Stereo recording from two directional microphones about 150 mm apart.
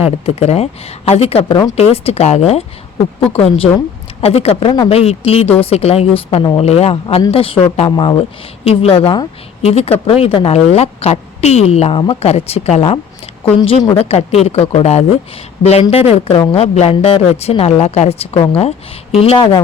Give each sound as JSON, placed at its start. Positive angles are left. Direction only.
{"t": 0.3, "sound": "a woman's voice", "side_deg": 45}